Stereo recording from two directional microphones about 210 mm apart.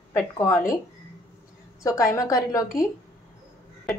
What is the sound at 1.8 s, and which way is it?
Speech, 15° left (ahead or behind).